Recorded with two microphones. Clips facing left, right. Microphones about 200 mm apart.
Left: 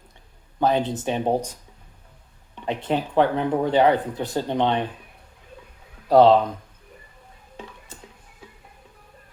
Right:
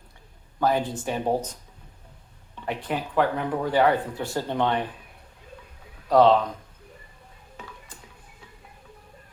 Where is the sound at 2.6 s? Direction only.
25° left (ahead or behind).